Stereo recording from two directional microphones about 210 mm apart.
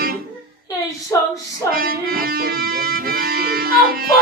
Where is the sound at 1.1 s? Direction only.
15° left (ahead or behind).